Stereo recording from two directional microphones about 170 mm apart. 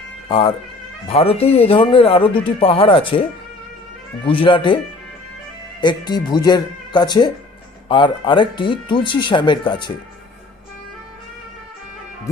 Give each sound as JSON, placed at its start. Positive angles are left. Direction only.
{"t": 0.3, "sound": "speech", "side_deg": 30}
{"t": 5.8, "sound": "speech", "side_deg": 25}